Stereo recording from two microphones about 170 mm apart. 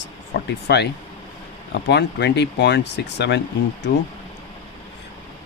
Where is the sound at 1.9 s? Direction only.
80° left.